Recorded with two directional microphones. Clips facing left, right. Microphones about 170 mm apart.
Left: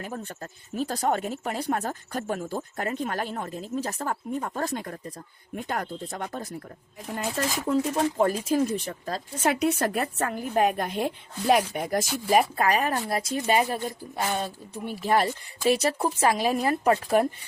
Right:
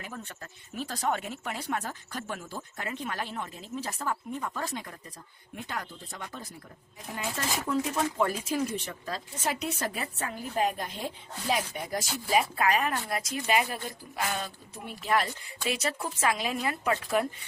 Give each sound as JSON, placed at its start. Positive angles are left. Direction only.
{"t": 0.8, "sound": "speech", "side_deg": 45}
{"t": 7.2, "sound": "speech", "side_deg": 40}
{"t": 9.4, "sound": "a woman's voice", "side_deg": 65}